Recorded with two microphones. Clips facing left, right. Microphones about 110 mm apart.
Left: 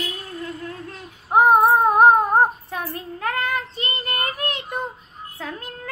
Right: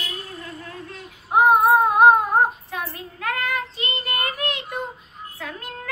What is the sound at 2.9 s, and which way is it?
Child singing, 35° left (ahead or behind).